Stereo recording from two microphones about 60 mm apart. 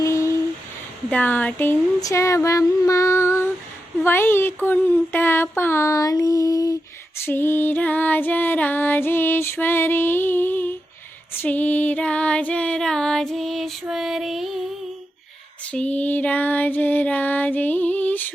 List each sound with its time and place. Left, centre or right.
0.0 s a sound: left
1.1 s speech: left
2.1 s female singing: left
4.0 s music: left
5.8 s a sound: left
7.3 s music: left; by 13.7 s centre
13.8 s female singing: centre
15.6 s music: centre